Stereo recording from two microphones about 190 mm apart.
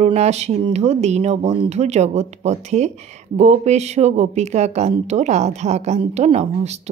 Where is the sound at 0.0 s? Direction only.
35° right (ahead or behind).